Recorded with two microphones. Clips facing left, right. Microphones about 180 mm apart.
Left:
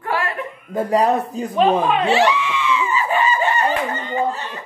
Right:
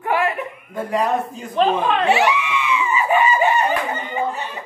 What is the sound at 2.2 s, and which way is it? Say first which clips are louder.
Screaming: left 1 dB; 15° right (ahead or behind).